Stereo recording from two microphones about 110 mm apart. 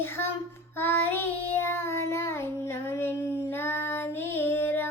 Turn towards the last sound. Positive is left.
turn(degrees=20)  # may be behind; listen again after turning